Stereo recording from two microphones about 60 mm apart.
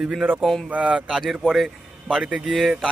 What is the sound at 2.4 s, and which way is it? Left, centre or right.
Speech, centre.